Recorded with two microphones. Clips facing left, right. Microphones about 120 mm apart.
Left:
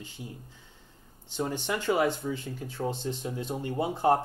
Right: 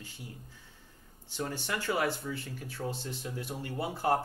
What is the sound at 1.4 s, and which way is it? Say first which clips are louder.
Speech: left 5 dB; 20° left (ahead or behind).